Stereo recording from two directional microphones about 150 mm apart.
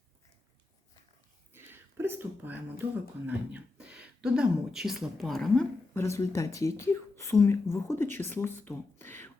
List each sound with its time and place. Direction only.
1.5 s speech: 15° right (ahead or behind); by 5.6 s centre (ahead or behind)
5.9 s speech: 20° left (ahead or behind)